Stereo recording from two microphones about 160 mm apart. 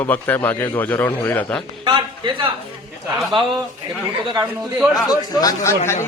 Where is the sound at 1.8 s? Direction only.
30° right (ahead or behind).